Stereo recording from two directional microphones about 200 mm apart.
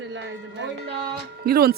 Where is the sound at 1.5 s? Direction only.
50° right (ahead or behind).